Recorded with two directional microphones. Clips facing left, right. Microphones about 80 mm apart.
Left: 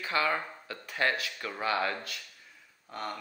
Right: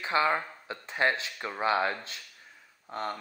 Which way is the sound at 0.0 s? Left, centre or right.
Right.